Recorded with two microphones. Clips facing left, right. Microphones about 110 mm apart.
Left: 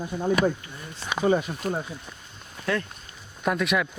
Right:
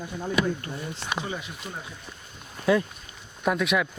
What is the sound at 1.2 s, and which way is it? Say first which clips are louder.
Speech: left 12 dB; 45° left (ahead or behind).